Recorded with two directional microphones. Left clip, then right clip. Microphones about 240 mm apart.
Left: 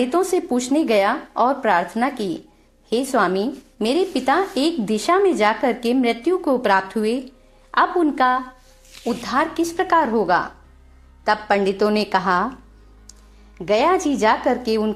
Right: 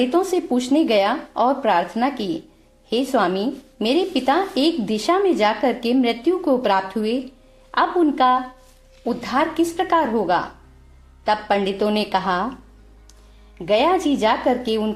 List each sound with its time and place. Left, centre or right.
0.0 s a woman's voice: left
13.7 s a woman's voice: left